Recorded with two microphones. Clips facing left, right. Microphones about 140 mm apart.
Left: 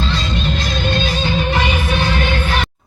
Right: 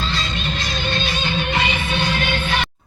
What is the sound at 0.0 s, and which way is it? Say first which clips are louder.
Music: left 5 dB; 50° left (ahead or behind).